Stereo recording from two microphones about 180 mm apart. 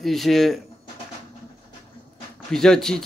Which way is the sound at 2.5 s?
5° left (ahead or behind).